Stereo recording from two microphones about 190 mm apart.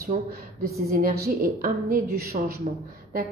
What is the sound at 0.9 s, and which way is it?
A woman's voice, 50° right (ahead or behind).